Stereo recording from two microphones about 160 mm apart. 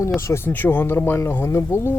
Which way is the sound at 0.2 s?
15° left (ahead or behind).